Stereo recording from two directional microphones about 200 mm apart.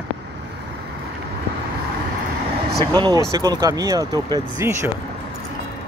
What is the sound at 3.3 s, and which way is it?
Speech, 20° right (ahead or behind).